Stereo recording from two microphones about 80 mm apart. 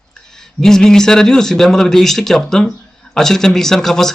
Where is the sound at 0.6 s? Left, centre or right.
Centre.